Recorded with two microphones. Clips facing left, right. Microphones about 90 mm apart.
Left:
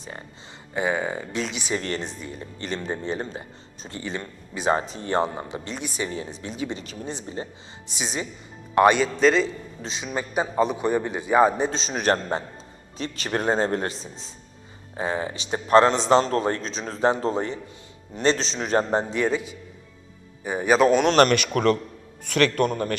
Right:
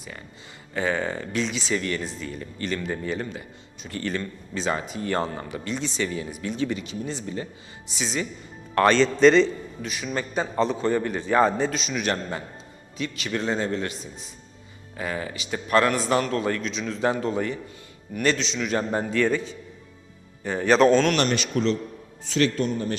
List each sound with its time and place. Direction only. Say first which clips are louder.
0.0 s a man's voice: left 2 dB; 30° left (ahead or behind)
0.7 s a man's voice: left 1 dB; 15° left (ahead or behind)
1.7 s a man's voice: even; 35° left (ahead or behind)
2.0 s a man's voice: right 1 dB; 20° left (ahead or behind)
4.0 s a man's voice: right 3 dB; 15° left (ahead or behind)
4.7 s a man's voice: left 4 dB; 30° left (ahead or behind); by 9.5 s 5° left (ahead or behind)
9.8 s a man's voice: even; 25° left (ahead or behind)
11.7 s a man's voice: left 3 dB; 35° left (ahead or behind)
14.9 s a man's voice: left 3 dB; 25° left (ahead or behind)
19.1 s a man's voice: right 1 dB; 15° left (ahead or behind)
21.2 s speech: left 5 dB; 55° left (ahead or behind)